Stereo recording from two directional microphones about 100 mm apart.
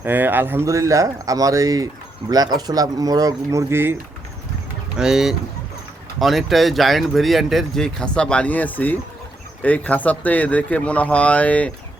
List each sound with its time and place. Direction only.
0.0 s speech: 20° right (ahead or behind); by 3.6 s 35° right (ahead or behind)
3.7 s speech: 20° right (ahead or behind)
4.9 s speech: 5° right (ahead or behind); by 11.7 s 15° left (ahead or behind)